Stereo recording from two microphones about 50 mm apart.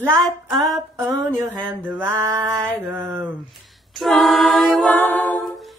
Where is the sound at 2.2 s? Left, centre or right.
Right.